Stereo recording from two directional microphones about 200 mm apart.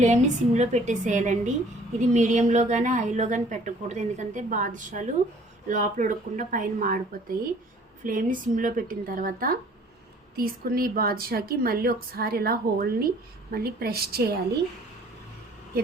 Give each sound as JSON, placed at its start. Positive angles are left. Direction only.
{"t": 0.0, "sound": "a woman's voice", "side_deg": -35}